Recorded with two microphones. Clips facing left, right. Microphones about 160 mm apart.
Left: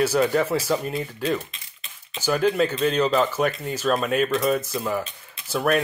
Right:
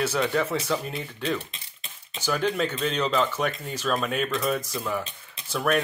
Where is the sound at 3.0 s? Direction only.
35° left (ahead or behind).